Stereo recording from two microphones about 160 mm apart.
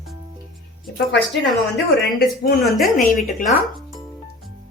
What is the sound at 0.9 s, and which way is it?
Speech, 90° left.